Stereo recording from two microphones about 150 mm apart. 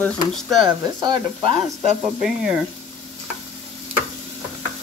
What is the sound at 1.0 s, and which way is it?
Sizzle, 40° right (ahead or behind).